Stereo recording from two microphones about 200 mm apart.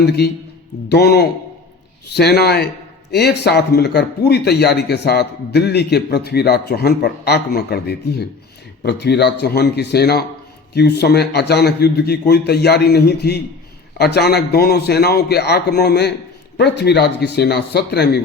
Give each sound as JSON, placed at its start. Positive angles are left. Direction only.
{"t": 0.0, "sound": "a man's voice", "side_deg": 55}